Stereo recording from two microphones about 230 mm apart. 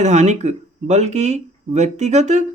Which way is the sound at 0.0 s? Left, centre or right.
Right.